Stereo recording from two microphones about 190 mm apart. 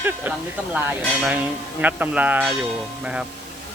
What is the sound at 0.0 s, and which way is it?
Speech, 10° right (ahead or behind).